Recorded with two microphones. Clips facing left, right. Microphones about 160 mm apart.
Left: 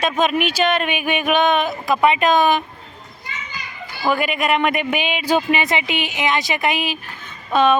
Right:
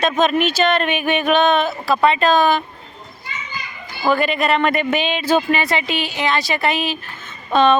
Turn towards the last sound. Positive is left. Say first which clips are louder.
# right 1 dB
turn(degrees=10)  # may be behind; listen again after turning